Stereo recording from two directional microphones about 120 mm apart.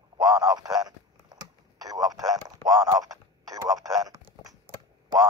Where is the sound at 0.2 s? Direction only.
35° right (ahead or behind).